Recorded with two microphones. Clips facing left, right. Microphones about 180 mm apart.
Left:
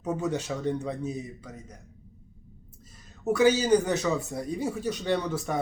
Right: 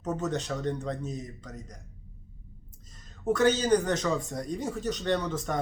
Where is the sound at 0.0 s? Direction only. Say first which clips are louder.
Left 2 dB; 10° left (ahead or behind).